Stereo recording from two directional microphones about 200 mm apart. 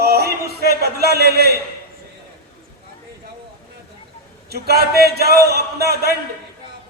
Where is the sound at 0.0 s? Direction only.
50° right (ahead or behind).